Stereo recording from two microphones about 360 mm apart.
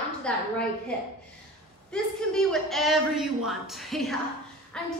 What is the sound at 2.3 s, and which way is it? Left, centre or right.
A woman's voice, centre.